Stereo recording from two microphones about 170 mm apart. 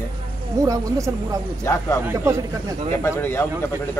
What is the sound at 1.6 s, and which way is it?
Speech, 15° left (ahead or behind).